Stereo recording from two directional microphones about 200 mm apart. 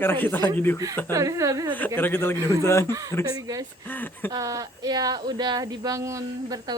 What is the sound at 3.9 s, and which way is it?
Speech, 10° left (ahead or behind).